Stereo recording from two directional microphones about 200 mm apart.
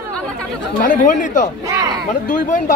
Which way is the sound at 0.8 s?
40° left (ahead or behind).